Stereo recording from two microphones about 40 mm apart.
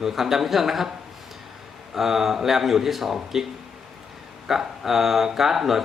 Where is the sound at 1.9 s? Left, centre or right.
Centre.